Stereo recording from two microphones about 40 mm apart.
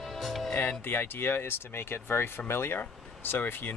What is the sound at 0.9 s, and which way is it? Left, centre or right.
Speech, left.